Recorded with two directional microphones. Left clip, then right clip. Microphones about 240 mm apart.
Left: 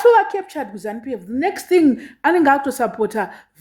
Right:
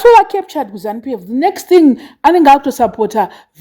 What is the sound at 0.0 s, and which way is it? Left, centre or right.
A woman's voice, right.